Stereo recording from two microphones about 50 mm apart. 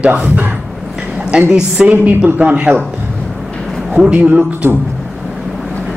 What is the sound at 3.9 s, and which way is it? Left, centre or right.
Speech, right.